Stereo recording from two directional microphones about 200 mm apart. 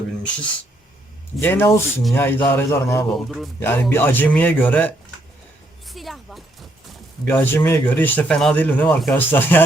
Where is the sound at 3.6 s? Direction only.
10° left (ahead or behind).